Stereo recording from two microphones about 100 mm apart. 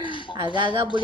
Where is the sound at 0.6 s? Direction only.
55° right (ahead or behind).